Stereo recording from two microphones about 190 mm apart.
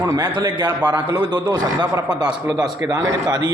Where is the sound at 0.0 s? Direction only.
20° right (ahead or behind).